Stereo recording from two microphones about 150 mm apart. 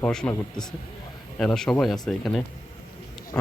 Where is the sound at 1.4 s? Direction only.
5° left (ahead or behind).